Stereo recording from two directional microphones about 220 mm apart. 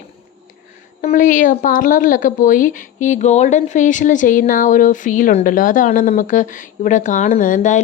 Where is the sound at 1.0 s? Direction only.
35° left (ahead or behind).